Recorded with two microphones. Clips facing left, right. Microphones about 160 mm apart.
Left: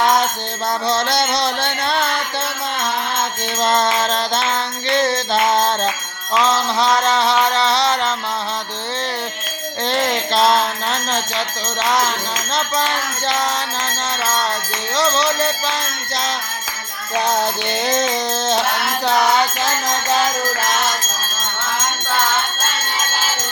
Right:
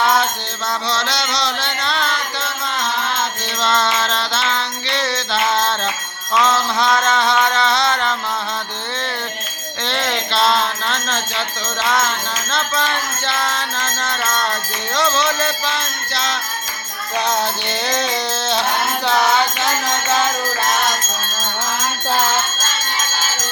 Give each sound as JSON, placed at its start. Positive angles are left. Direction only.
{"t": 0.0, "sound": "music", "side_deg": 40}
{"t": 3.6, "sound": "music", "side_deg": 45}
{"t": 6.4, "sound": "music", "side_deg": 35}
{"t": 9.8, "sound": "bell", "side_deg": 45}
{"t": 12.5, "sound": "music", "side_deg": 40}
{"t": 17.8, "sound": "music", "side_deg": 45}